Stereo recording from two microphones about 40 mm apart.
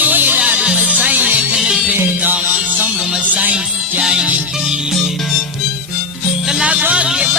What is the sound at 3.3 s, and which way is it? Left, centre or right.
Music, right.